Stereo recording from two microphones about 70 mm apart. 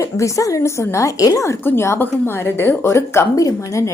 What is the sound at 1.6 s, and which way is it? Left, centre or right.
A woman's voice, left.